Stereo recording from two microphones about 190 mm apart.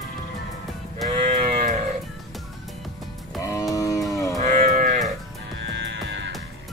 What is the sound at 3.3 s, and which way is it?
Music, 20° left (ahead or behind).